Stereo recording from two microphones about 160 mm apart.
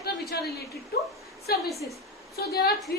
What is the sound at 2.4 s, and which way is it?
Speech, 75° left (ahead or behind).